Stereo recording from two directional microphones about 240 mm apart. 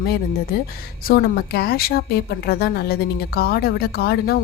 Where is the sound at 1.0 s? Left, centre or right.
Left.